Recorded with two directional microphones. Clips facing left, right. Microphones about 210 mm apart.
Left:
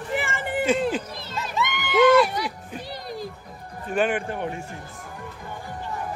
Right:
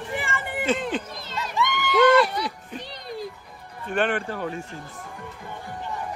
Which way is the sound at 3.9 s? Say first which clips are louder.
Left 1 dB; 10° left (ahead or behind).